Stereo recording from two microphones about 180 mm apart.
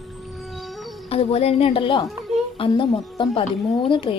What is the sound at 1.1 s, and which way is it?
A woman's voice, 35° left (ahead or behind).